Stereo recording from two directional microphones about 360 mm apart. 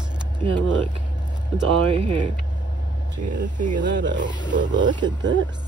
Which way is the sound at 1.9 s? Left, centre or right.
Centre.